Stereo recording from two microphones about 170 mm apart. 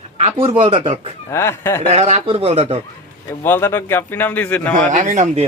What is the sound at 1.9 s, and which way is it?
Speech, 40° right (ahead or behind).